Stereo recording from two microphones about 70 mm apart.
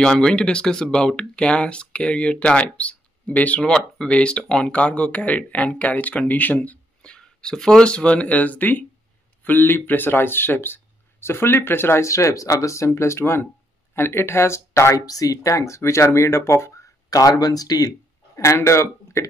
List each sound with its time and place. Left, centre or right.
0.0 s speech: centre
7.0 s speech: centre; by 15.0 s left
15.0 s speech: left
17.1 s speech: left
18.3 s a man's voice: left